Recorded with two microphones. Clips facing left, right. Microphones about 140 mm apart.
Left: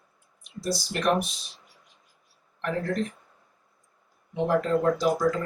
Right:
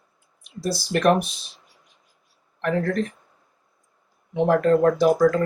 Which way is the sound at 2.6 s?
60° right (ahead or behind).